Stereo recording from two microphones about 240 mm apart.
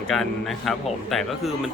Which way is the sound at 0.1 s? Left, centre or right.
Centre.